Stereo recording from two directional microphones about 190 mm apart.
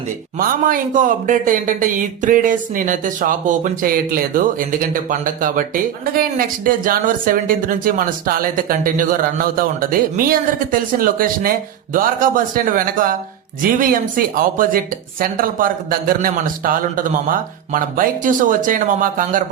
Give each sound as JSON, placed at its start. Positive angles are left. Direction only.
{"t": 0.3, "sound": "speech", "side_deg": -45}